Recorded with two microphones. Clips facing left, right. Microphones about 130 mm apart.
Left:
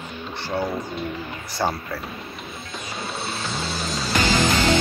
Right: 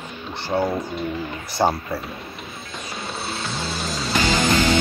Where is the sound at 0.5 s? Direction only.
20° right (ahead or behind).